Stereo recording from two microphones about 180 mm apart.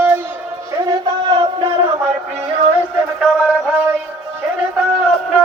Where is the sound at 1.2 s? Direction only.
25° right (ahead or behind).